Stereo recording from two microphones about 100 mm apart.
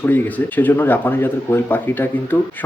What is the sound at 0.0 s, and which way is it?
A man's voice, 15° left (ahead or behind).